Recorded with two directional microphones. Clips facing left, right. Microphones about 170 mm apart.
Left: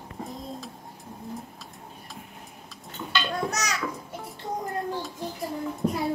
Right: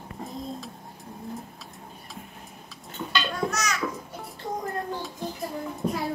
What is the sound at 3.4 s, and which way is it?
Babbling, 35° left (ahead or behind).